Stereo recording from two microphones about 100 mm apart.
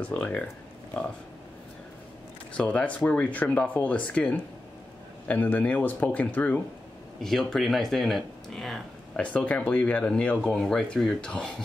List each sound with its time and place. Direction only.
0.0 s speech: 15° left (ahead or behind)
2.5 s speech: 15° left (ahead or behind)
7.2 s speech: 5° left (ahead or behind)
9.2 s speech: 15° left (ahead or behind)